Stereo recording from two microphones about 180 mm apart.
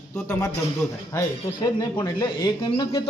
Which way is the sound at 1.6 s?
20° left (ahead or behind).